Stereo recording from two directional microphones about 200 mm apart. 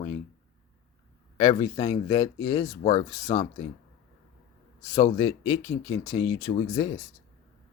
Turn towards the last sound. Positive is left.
turn(degrees=20)  # may be behind; listen again after turning